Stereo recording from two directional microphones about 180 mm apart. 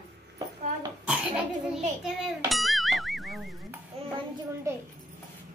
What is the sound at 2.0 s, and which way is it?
Speech, centre (ahead or behind).